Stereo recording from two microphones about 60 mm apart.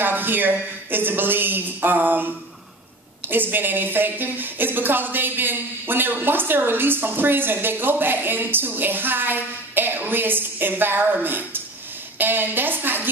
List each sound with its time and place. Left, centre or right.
0.0 s a woman's voice: right